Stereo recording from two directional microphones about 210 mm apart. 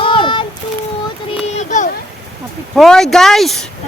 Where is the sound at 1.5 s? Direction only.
35° left (ahead or behind).